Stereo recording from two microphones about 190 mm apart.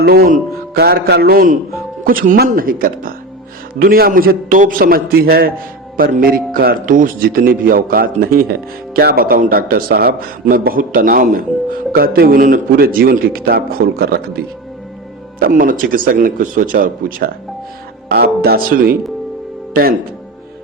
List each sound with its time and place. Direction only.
0.0 s speech: 55° right (ahead or behind)